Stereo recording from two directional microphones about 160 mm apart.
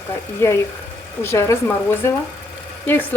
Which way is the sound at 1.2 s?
15° left (ahead or behind).